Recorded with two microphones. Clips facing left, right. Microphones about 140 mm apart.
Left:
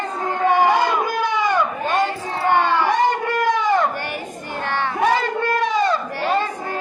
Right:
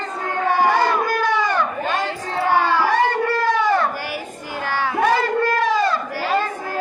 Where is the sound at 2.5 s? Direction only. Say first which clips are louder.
Left 1 dB; 5° right (ahead or behind).